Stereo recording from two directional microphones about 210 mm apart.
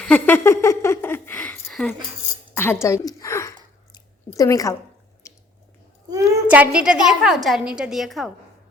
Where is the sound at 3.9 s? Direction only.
20° left (ahead or behind).